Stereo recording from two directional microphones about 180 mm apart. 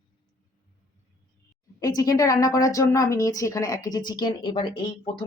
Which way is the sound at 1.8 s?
20° left (ahead or behind).